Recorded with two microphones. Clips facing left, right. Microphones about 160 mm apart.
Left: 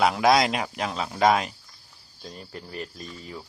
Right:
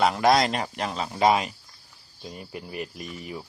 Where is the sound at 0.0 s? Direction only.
Centre (ahead or behind).